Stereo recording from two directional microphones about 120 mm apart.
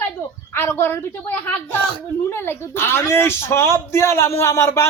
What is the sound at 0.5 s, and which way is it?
Speech, 20° left (ahead or behind).